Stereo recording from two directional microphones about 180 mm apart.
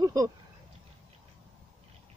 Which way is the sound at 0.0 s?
20° right (ahead or behind).